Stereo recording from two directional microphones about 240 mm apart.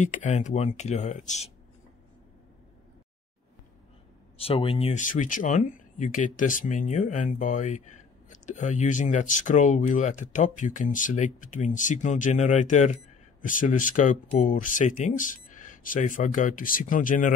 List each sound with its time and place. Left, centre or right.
0.0 s speech: left
4.4 s speech: left